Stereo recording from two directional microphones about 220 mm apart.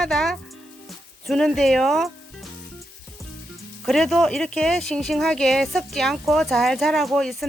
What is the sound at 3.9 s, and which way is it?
Speech, centre (ahead or behind).